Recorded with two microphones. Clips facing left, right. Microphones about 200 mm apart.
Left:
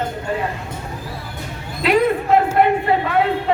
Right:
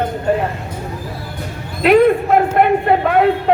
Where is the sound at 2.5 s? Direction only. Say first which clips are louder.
Right 3 dB; 55° right (ahead or behind).